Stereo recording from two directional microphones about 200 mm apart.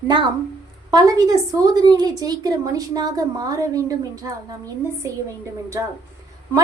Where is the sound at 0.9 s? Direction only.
20° right (ahead or behind).